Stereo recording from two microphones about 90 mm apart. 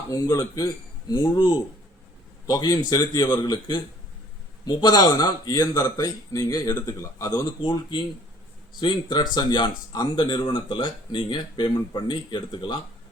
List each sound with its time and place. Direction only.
0.1 s speech: 40° left (ahead or behind)
1.2 s speech: 60° left (ahead or behind)
2.5 s a man's voice: 40° left (ahead or behind)
7.6 s speech: 65° left (ahead or behind)